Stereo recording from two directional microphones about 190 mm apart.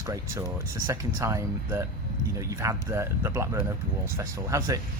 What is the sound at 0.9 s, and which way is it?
Speech, 15° right (ahead or behind).